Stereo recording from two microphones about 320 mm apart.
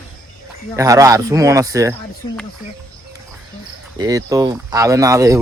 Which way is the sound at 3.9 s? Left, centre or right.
Centre.